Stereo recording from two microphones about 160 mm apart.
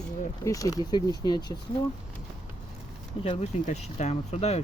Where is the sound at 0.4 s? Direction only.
20° left (ahead or behind).